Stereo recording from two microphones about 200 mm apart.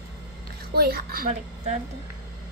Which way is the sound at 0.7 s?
50° right (ahead or behind).